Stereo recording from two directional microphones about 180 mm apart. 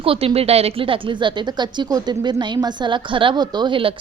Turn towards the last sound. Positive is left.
turn(degrees=-25)  # may be behind; listen again after turning